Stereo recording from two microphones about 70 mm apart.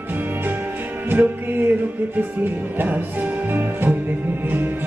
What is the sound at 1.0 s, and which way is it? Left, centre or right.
Music, right.